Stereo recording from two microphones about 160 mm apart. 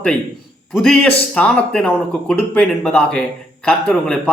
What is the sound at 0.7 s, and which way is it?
A man's voice, 5° left (ahead or behind).